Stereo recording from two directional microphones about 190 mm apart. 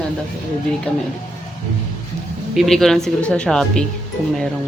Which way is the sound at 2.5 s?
Centre (ahead or behind).